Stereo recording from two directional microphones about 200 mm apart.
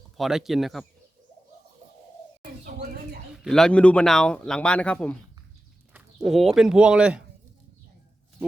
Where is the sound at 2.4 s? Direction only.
50° right (ahead or behind).